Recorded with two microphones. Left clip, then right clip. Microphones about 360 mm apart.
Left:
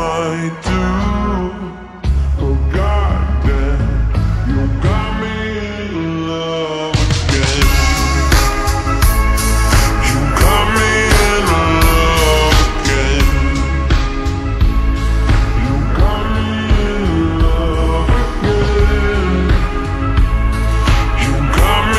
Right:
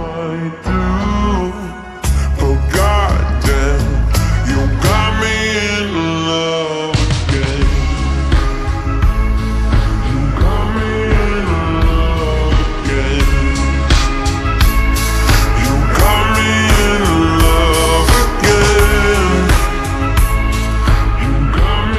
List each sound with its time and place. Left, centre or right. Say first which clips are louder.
0.7 s music: even; centre
2.7 s music: right 5 dB; right
4.8 s music: right 7 dB; right
6.0 s mantra: right 2 dB; centre
10.3 s music: left 8 dB; left
12.8 s music: left 2 dB; centre
15.2 s music: right 4 dB; right
17.9 s music: right 5 dB; right
18.6 s music: right 5 dB; right
21.5 s music: left 6 dB; centre